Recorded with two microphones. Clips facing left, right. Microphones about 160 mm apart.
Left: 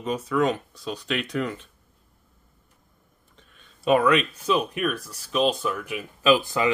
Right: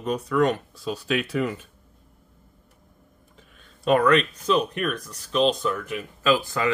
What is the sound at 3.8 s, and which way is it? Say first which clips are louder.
Speech: right 1 dB; 5° left (ahead or behind).